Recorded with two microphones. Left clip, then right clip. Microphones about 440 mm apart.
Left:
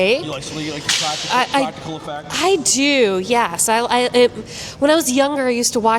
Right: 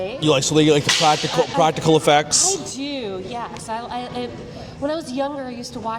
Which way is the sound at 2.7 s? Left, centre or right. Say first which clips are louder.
Left 13 dB; left.